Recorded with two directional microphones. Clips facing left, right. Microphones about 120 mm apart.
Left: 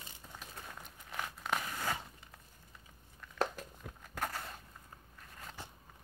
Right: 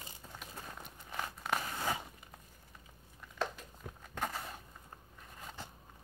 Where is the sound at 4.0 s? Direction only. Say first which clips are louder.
Right 1 dB; centre (ahead or behind).